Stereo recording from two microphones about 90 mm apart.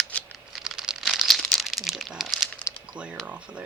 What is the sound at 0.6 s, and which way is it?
Crumpling, 5° right (ahead or behind).